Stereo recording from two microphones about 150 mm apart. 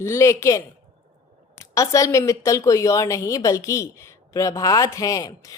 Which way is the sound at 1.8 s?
20° left (ahead or behind).